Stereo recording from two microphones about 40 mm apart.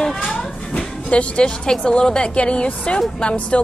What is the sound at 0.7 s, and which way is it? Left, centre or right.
Music, left.